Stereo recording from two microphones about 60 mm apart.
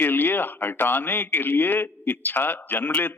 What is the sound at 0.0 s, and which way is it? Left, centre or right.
Speech, left.